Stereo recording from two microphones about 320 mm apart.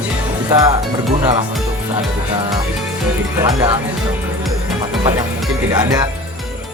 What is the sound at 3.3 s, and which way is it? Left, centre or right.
Speech, centre.